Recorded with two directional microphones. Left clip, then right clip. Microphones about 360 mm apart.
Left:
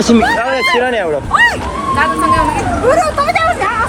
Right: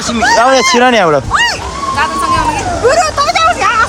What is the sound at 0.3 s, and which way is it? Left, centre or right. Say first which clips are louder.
Speech: right 5 dB; centre.